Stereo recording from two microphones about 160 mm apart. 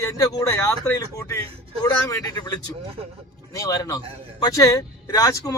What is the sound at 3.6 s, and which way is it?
A man's voice, 20° left (ahead or behind).